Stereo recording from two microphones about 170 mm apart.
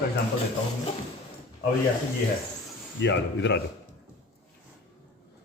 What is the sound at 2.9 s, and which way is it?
Speech, 90° left.